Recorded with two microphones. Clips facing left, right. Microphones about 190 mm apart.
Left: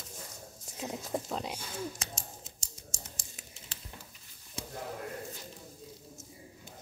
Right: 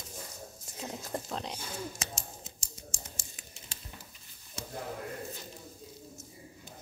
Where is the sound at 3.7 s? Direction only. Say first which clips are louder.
Left 1 dB; 10° right (ahead or behind).